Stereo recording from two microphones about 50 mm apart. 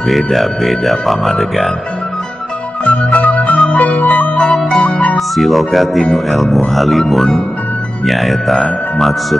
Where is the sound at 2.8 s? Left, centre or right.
Left.